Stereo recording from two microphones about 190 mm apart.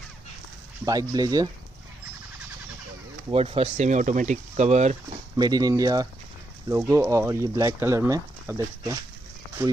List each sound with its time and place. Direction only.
0.8 s speech: 20° right (ahead or behind)
3.3 s speech: 30° right (ahead or behind)
5.4 s speech: 20° right (ahead or behind)